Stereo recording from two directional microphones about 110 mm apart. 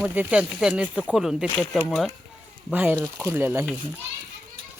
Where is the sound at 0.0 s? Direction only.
15° right (ahead or behind).